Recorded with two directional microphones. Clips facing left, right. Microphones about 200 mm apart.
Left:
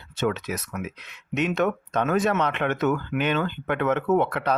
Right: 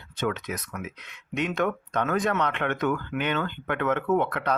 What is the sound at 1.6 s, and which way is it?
Speech, 20° left (ahead or behind).